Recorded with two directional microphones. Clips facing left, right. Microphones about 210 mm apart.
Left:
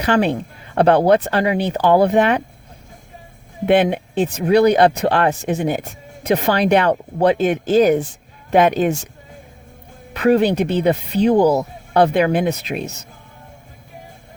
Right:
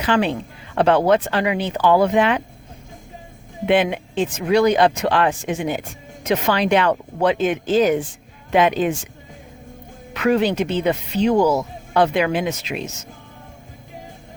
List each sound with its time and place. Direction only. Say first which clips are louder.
0.0 s speech: left 2 dB; 40° left (ahead or behind)
3.7 s speech: left 3 dB; 45° left (ahead or behind)
10.2 s speech: left 3 dB; 35° left (ahead or behind)
12.7 s speech: left 3 dB; 35° left (ahead or behind)